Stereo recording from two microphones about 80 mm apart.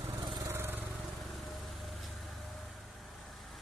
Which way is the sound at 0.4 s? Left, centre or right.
Right.